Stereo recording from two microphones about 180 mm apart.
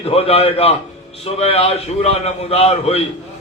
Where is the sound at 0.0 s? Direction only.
35° left (ahead or behind).